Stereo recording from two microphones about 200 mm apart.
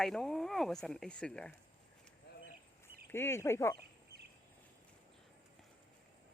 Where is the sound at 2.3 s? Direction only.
55° left (ahead or behind).